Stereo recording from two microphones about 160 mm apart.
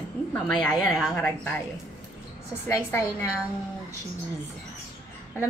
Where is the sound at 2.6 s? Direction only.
20° left (ahead or behind).